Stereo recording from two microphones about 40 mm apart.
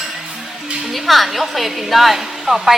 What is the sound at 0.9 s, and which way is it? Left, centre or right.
A woman's voice, centre.